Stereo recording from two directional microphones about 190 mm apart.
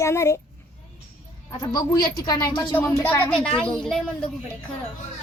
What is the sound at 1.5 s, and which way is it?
Speech, 20° left (ahead or behind).